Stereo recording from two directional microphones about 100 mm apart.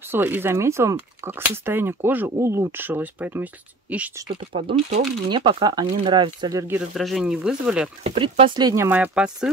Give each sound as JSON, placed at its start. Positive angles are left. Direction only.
{"t": 0.1, "sound": "speech", "side_deg": -20}
{"t": 4.3, "sound": "speech", "side_deg": -70}
{"t": 5.3, "sound": "speech", "side_deg": -50}
{"t": 6.9, "sound": "speech", "side_deg": 0}
{"t": 8.0, "sound": "speech", "side_deg": -75}
{"t": 8.7, "sound": "speech", "side_deg": -20}